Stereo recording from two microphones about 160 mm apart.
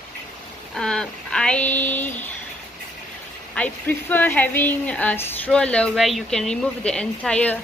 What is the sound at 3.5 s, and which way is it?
Speech, 10° left (ahead or behind).